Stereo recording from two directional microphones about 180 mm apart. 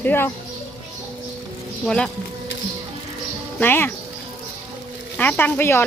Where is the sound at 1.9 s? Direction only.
5° left (ahead or behind).